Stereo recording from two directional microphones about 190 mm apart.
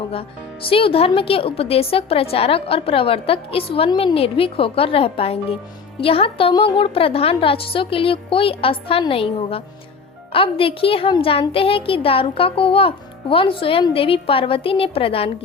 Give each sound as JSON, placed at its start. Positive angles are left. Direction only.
{"t": 0.7, "sound": "a woman's voice", "side_deg": 30}